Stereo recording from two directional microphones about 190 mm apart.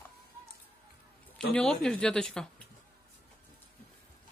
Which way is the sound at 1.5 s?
5° left (ahead or behind).